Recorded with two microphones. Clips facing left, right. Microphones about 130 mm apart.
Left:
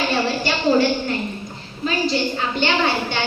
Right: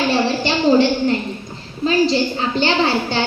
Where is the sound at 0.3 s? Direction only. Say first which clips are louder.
Right 4 dB; 25° right (ahead or behind).